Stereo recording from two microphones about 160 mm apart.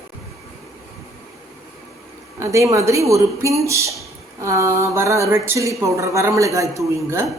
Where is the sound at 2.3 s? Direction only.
20° right (ahead or behind).